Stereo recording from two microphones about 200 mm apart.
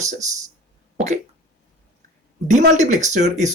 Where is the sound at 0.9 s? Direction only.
35° right (ahead or behind).